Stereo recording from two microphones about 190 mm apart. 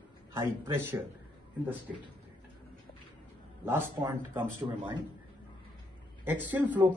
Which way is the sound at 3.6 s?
15° right (ahead or behind).